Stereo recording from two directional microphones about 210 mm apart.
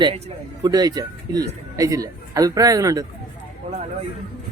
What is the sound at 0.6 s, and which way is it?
A man's voice, 20° right (ahead or behind).